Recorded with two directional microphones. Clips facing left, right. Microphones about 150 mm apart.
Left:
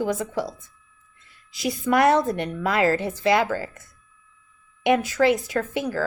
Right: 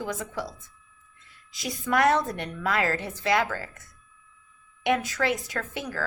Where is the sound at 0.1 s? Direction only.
25° left (ahead or behind).